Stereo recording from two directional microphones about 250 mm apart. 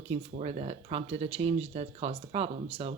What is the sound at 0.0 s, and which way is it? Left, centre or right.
Speech, right.